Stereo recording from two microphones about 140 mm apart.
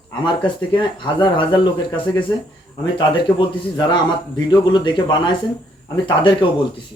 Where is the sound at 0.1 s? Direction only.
35° left (ahead or behind).